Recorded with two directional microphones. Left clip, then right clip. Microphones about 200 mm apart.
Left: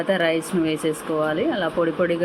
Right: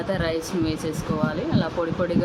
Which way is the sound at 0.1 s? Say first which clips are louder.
Left 5 dB; 10° left (ahead or behind).